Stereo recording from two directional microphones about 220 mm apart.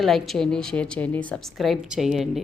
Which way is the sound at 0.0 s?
Centre (ahead or behind).